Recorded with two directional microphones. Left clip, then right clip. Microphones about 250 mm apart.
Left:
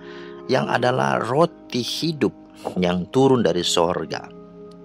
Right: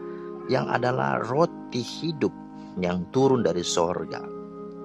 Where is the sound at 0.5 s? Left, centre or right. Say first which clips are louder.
Left 5 dB; left.